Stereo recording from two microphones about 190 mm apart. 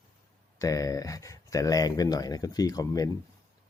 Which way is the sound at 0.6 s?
15° left (ahead or behind).